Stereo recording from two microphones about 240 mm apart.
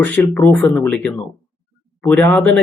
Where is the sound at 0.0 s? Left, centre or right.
Centre.